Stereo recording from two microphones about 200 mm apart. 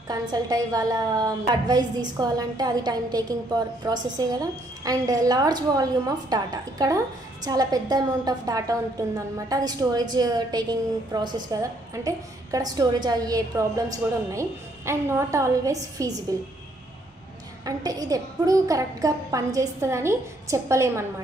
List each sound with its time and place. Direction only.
0.1 s a woman's voice: 20° right (ahead or behind)
17.6 s a woman's voice: 20° right (ahead or behind)